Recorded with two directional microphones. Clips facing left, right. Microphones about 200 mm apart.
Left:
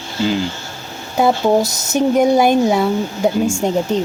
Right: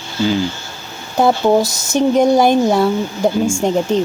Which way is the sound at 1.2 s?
Centre (ahead or behind).